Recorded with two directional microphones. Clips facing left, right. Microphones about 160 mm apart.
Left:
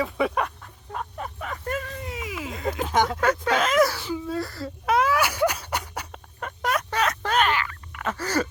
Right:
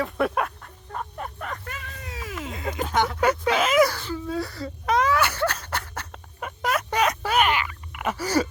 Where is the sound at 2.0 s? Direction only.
25° left (ahead or behind).